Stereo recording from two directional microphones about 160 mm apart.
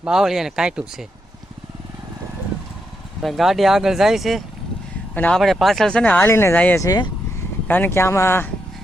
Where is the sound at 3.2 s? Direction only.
Centre (ahead or behind); by 8.5 s 15° left (ahead or behind).